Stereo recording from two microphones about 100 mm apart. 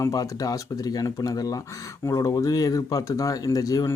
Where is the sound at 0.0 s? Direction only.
40° left (ahead or behind).